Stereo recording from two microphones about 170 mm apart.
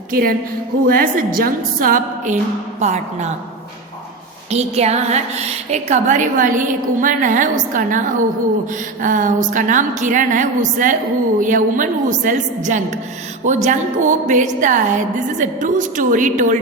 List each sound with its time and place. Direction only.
0.1 s a woman's voice: 60° right (ahead or behind); by 3.3 s 40° right (ahead or behind)
4.5 s a woman's voice: 40° right (ahead or behind)